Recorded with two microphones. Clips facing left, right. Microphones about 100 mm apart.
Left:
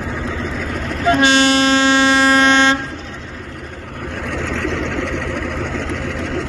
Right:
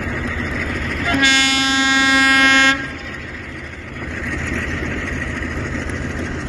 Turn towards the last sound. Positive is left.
turn(degrees=75)  # may be behind; listen again after turning